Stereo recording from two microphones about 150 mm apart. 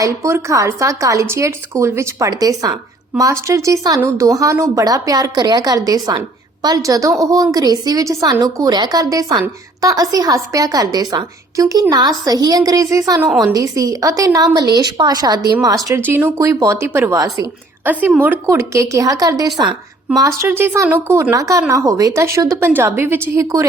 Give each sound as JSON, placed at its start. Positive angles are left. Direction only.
{"t": 0.0, "sound": "speech", "side_deg": -20}
{"t": 15.9, "sound": "speech", "side_deg": -15}
{"t": 18.0, "sound": "speech", "side_deg": -10}